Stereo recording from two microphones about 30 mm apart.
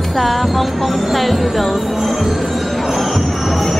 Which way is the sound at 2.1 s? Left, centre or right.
Centre.